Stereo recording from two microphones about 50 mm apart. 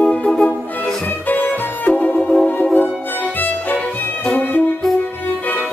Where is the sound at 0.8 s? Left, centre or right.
Left.